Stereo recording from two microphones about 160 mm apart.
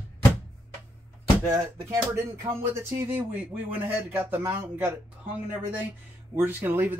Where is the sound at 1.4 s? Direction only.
20° right (ahead or behind).